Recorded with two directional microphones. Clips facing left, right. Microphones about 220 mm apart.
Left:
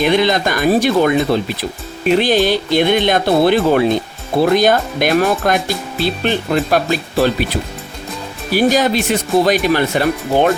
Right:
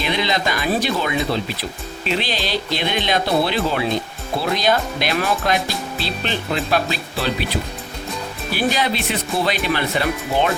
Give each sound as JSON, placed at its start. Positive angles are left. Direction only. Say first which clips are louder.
{"t": 0.0, "sound": "speech", "louder": "left 8 dB", "side_deg": 50}
{"t": 8.5, "sound": "speech", "louder": "left 8 dB", "side_deg": 45}